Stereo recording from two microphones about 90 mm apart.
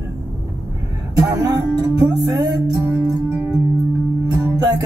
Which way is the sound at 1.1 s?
45° right (ahead or behind).